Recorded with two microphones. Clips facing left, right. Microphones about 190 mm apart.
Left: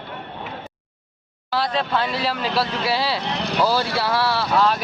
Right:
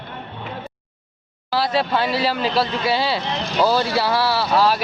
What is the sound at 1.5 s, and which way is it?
Speech, 5° right (ahead or behind).